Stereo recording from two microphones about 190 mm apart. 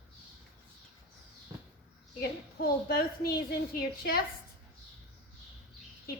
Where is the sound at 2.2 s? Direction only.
55° left (ahead or behind).